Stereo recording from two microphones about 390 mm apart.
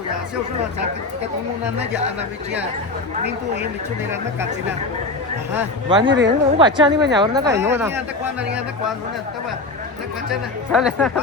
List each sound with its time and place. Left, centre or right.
3.2 s speech: right
5.5 s a woman's voice: centre
10.7 s speech: centre